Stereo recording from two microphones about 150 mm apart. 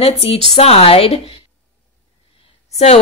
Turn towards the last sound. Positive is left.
turn(degrees=45)  # may be behind; listen again after turning